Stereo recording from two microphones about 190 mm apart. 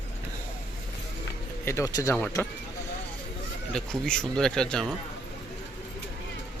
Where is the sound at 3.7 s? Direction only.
5° left (ahead or behind).